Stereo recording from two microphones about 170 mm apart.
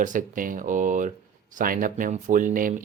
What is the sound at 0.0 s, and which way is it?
Speech, 50° right (ahead or behind).